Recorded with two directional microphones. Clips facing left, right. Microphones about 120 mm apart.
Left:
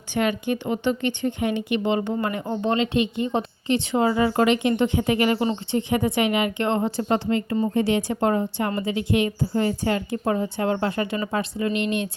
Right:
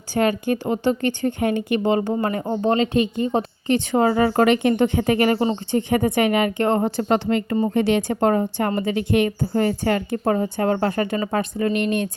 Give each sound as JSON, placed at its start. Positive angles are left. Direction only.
{"t": 0.1, "sound": "a woman's voice", "side_deg": -40}